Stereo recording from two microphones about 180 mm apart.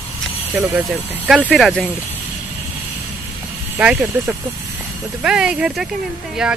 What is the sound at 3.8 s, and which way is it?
Speech, 5° right (ahead or behind).